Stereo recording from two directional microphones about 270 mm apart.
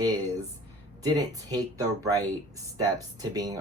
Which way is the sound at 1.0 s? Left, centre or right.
Centre.